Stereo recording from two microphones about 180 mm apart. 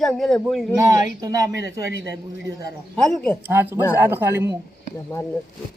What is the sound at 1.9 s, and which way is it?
Speech, 75° right (ahead or behind).